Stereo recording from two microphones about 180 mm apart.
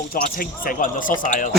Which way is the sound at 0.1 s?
50° left (ahead or behind).